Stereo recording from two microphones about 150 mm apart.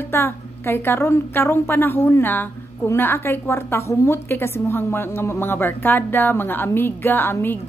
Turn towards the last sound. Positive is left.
turn(degrees=15)  # may be behind; listen again after turning